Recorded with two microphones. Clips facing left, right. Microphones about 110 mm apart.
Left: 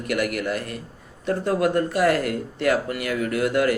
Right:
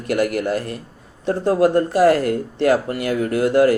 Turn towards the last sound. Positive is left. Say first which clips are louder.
# right 6 dB
turn(degrees=-30)  # may be behind; listen again after turning